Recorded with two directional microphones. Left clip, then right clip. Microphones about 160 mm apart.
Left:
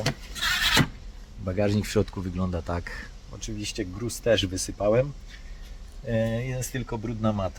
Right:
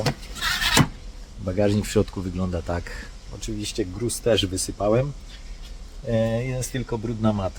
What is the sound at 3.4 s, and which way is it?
Speech, centre (ahead or behind).